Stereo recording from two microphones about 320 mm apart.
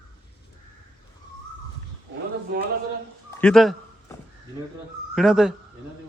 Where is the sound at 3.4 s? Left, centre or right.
Centre.